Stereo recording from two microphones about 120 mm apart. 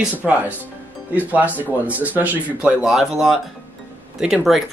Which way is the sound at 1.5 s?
15° right (ahead or behind).